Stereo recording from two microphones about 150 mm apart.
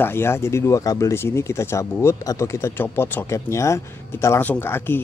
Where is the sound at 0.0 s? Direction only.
15° left (ahead or behind).